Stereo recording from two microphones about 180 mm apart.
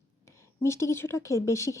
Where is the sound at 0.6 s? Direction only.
15° left (ahead or behind).